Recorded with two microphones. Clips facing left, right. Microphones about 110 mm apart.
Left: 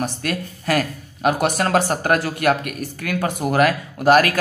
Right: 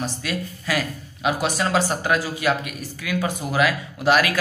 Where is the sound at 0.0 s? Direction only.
50° left (ahead or behind).